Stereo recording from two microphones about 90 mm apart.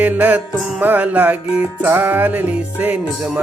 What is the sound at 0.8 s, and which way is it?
Music, 20° right (ahead or behind).